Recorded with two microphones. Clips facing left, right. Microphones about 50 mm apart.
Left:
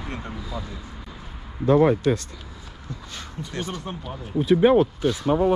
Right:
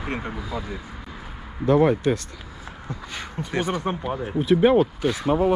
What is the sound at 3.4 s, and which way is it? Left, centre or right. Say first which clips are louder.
Speech: right 6 dB; right.